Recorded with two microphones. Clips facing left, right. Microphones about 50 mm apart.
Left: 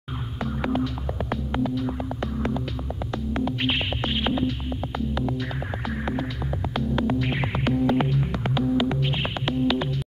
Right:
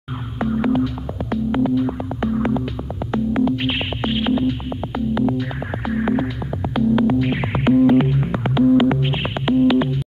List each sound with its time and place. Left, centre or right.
0.5 s throbbing: centre; by 2.6 s right
3.3 s music: centre
5.9 s hum: centre
6.7 s music: centre; by 9.2 s right
9.2 s music: centre